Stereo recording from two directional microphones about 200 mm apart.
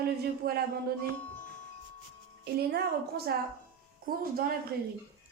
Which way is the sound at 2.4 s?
55° right (ahead or behind).